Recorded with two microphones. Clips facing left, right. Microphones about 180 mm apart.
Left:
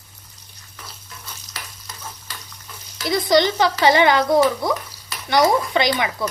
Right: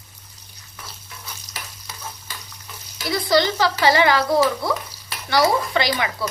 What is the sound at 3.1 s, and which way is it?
Speech, 20° left (ahead or behind).